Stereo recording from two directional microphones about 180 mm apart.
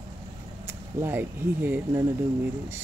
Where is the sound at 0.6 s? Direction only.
10° right (ahead or behind).